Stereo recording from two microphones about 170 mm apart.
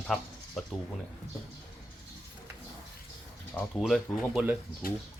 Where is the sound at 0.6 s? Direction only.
Centre (ahead or behind).